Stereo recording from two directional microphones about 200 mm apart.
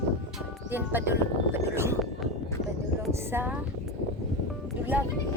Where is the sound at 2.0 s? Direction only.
Centre (ahead or behind).